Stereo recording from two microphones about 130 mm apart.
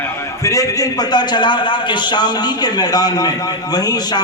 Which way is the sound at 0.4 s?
25° left (ahead or behind).